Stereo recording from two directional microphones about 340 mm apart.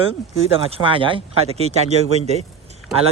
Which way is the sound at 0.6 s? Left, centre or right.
Centre.